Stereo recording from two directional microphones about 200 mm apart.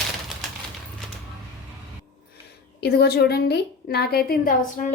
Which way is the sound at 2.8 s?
50° left (ahead or behind).